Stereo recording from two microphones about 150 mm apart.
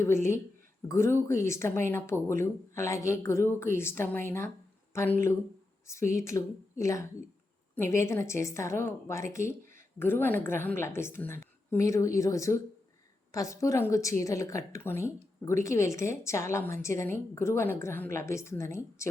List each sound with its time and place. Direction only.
0.0 s a woman's voice: 15° left (ahead or behind)